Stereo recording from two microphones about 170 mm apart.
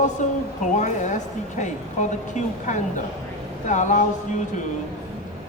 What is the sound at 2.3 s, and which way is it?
Speech, 45° left (ahead or behind).